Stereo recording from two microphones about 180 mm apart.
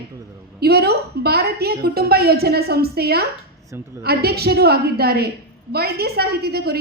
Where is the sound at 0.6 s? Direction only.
60° right (ahead or behind).